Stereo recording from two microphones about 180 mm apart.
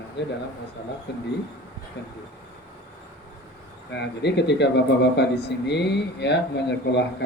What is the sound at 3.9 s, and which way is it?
A man's voice, 70° left (ahead or behind).